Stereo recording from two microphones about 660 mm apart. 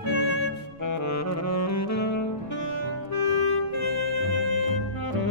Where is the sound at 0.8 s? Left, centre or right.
Left.